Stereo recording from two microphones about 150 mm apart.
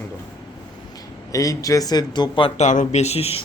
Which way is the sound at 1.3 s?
20° left (ahead or behind).